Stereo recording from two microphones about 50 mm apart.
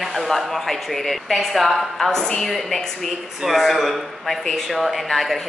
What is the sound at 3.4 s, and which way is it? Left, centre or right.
A woman's voice, centre.